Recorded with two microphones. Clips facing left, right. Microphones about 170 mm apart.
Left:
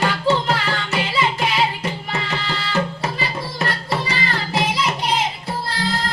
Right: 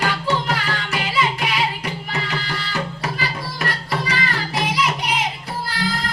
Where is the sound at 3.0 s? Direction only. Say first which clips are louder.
Left 1 dB; 25° left (ahead or behind).